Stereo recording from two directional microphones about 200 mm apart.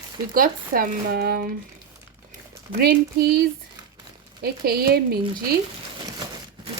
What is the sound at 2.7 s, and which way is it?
Speech, 50° right (ahead or behind).